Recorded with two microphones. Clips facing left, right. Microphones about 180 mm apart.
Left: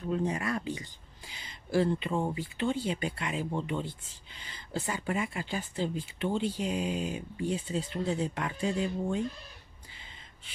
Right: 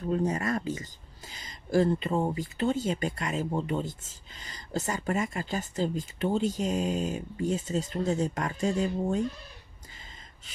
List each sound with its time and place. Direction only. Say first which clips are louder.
0.1 s speech: right 3 dB; 40° right (ahead or behind)